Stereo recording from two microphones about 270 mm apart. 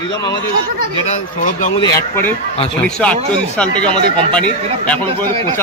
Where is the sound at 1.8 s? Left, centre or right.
Centre.